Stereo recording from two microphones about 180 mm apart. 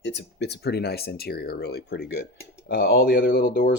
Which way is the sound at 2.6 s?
60° left (ahead or behind).